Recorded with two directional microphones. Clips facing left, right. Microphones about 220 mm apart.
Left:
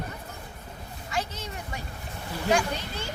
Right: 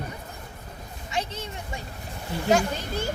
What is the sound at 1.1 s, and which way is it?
Speech, 25° right (ahead or behind).